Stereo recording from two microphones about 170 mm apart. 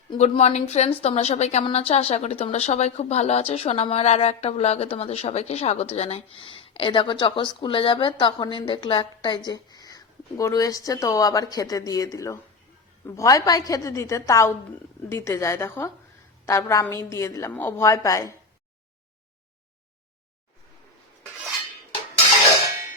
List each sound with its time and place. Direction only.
0.2 s a woman's voice: 40° left (ahead or behind); by 18.3 s 20° left (ahead or behind)